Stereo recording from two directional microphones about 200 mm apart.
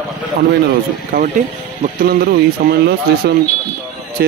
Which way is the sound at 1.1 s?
45° right (ahead or behind).